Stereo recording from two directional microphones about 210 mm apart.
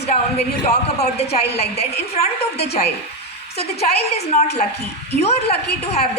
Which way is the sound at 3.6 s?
50° left (ahead or behind).